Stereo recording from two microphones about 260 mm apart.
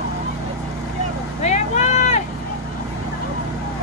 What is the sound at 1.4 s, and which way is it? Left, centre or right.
Vehicle, left.